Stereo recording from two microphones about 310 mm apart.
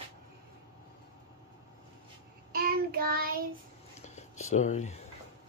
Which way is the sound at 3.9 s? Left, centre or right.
Left.